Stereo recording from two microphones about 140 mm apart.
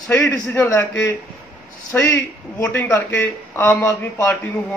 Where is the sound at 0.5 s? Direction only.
15° left (ahead or behind).